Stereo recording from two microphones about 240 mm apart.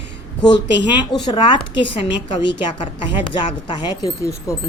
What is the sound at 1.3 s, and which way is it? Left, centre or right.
A woman's voice, centre.